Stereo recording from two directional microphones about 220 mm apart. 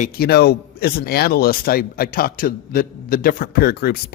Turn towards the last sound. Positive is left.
turn(degrees=45)  # may be behind; listen again after turning